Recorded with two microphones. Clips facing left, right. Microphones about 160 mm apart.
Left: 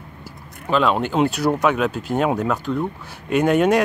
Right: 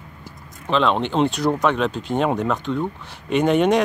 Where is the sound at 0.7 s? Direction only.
5° left (ahead or behind).